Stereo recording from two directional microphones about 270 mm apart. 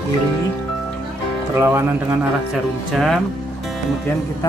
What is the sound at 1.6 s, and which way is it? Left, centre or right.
Speech, centre.